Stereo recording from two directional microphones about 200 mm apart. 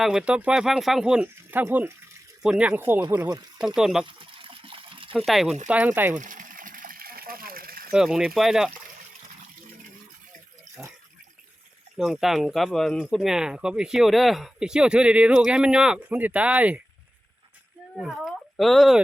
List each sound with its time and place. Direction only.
0.0 s speech: 5° right (ahead or behind)
3.8 s speech: 5° right (ahead or behind)
4.0 s water: 25° right (ahead or behind)
5.1 s speech: centre (ahead or behind)
6.1 s a sound: 40° right (ahead or behind)
7.9 s speech: 5° right (ahead or behind)
10.8 s speech: 5° right (ahead or behind)
11.9 s speech: centre (ahead or behind)
17.9 s speech: centre (ahead or behind)